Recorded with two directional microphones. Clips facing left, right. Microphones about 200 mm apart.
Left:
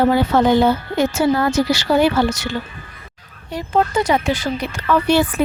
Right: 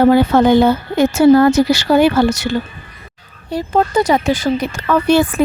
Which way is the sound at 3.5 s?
35° right (ahead or behind).